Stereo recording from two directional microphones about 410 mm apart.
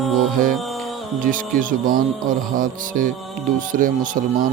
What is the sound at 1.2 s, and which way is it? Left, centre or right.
Speech, centre.